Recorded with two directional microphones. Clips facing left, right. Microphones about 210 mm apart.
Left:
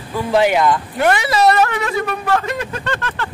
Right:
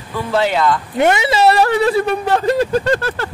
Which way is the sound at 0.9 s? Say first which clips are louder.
Right 2 dB; 20° right (ahead or behind).